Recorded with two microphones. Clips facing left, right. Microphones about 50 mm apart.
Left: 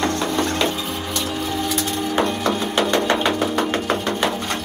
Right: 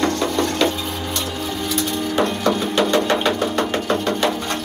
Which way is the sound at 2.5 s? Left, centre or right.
Centre.